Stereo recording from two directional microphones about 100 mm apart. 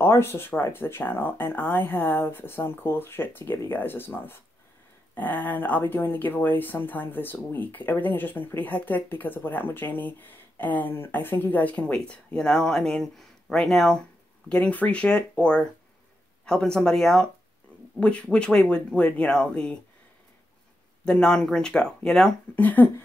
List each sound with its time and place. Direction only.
0.0 s speech: 25° left (ahead or behind)
21.0 s speech: 5° left (ahead or behind)
22.6 s speech: 15° left (ahead or behind)